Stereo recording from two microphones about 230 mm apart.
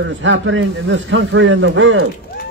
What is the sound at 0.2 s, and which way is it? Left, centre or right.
A man's voice, right.